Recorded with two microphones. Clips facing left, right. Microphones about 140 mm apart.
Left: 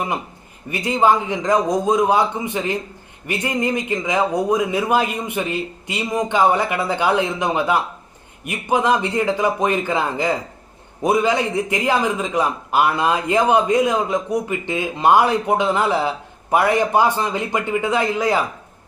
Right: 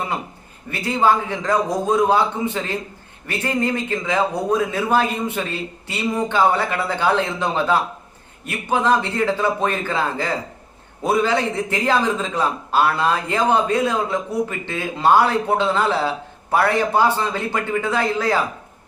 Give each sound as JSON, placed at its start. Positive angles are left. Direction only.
{"t": 0.7, "sound": "speech", "side_deg": 15}